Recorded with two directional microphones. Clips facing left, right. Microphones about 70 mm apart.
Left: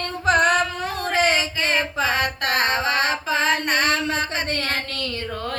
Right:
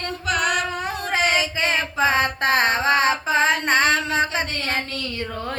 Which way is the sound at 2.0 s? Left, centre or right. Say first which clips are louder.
Right 3 dB; right.